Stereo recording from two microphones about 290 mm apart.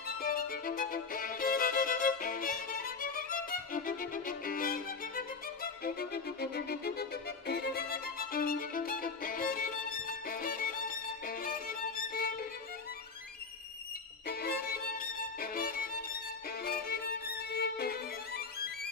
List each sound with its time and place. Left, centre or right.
0.2 s violin: left
14.2 s violin: left